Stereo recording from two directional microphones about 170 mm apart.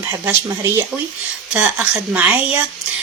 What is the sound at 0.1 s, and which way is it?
Speech, 15° right (ahead or behind).